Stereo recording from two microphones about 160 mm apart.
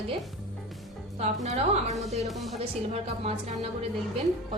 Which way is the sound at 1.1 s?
45° right (ahead or behind).